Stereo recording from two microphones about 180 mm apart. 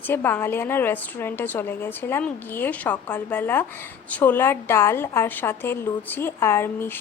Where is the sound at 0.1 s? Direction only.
10° left (ahead or behind).